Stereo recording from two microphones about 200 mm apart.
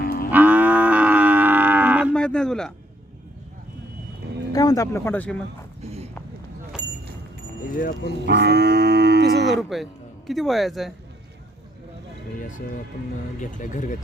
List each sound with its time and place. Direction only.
0.0 s moo: 50° left (ahead or behind)
0.3 s livestock: 10° right (ahead or behind)
2.1 s a sound: 5° left (ahead or behind)
4.5 s speech: 15° left (ahead or behind)
5.8 s a sound: 30° right (ahead or behind)
7.8 s speech: 45° left (ahead or behind)
8.2 s livestock: 60° right (ahead or behind)
9.6 s a man's voice: centre (ahead or behind)
13.4 s speech: 40° left (ahead or behind)